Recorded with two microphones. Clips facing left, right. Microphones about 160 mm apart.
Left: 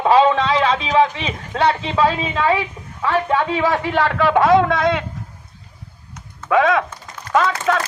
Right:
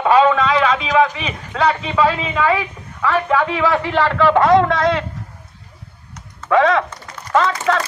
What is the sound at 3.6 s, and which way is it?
A man's voice, 10° left (ahead or behind).